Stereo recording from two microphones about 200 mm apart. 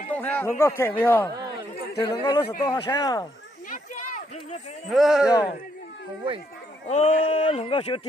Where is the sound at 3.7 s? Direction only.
40° left (ahead or behind).